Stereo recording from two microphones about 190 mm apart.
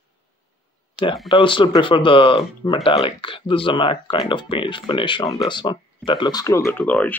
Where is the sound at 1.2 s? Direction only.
25° left (ahead or behind).